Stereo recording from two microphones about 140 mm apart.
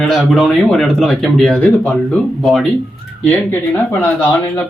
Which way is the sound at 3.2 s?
15° left (ahead or behind).